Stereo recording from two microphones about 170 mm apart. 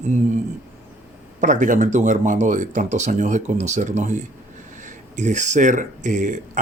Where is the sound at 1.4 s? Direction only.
45° right (ahead or behind).